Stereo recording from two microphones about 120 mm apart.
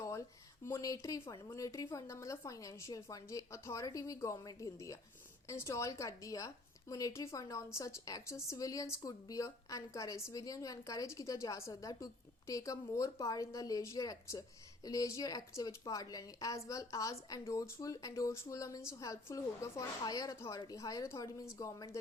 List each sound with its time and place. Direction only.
0.0 s a woman's voice: 25° left (ahead or behind)